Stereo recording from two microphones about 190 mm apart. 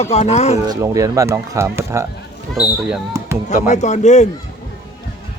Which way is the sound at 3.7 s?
40° left (ahead or behind).